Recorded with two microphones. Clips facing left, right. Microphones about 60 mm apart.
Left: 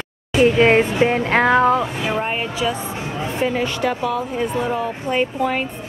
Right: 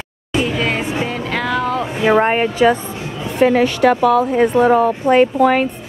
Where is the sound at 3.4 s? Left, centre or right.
Right.